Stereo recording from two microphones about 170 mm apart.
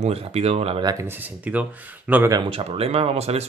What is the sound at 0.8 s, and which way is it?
Speech, 25° right (ahead or behind).